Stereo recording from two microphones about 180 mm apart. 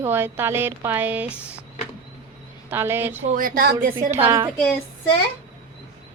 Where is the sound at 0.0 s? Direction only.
10° right (ahead or behind).